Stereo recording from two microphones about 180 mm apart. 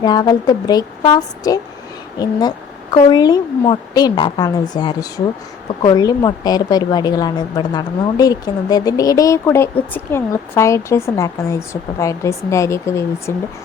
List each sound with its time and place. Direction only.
0.0 s a woman's voice: 20° left (ahead or behind)